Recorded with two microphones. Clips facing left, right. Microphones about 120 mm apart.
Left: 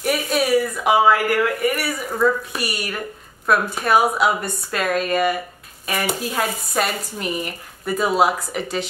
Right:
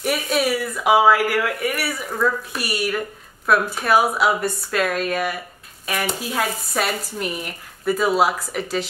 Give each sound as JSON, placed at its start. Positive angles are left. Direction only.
{"t": 0.0, "sound": "speech", "side_deg": 0}